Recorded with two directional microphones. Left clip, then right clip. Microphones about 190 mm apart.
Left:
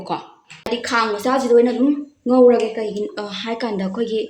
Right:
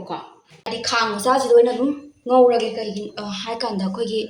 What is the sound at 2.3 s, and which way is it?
Speech, 40° left (ahead or behind).